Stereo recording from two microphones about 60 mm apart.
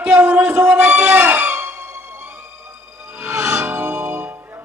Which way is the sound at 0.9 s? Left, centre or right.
Right.